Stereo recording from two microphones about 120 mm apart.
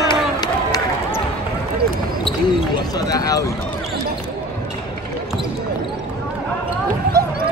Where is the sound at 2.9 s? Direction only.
30° left (ahead or behind).